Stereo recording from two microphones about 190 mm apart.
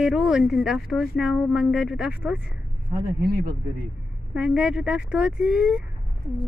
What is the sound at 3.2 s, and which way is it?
Speech, 55° right (ahead or behind).